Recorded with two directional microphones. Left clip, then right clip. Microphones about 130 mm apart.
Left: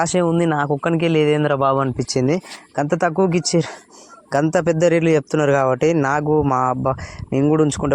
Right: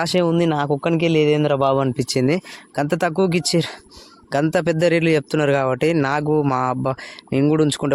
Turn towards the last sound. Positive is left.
turn(degrees=-10)  # may be behind; listen again after turning